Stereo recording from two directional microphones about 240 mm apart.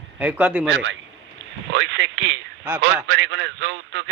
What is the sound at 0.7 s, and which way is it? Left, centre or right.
A man's voice, right.